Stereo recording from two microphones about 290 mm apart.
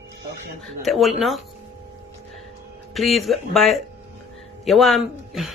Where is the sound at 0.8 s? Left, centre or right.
Centre.